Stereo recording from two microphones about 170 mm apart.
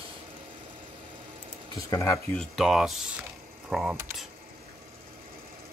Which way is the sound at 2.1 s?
Centre (ahead or behind).